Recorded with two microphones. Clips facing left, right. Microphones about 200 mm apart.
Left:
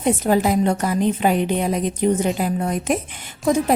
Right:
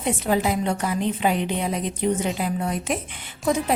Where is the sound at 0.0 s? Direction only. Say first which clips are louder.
Left 5 dB; 45° left (ahead or behind).